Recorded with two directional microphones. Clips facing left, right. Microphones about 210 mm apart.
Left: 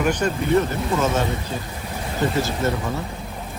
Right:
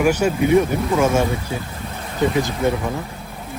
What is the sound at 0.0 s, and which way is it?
Speech, 10° right (ahead or behind).